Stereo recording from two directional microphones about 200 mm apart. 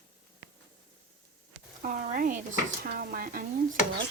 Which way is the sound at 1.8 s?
45° right (ahead or behind).